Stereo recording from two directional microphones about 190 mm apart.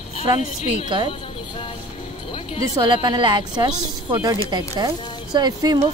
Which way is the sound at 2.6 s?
20° right (ahead or behind).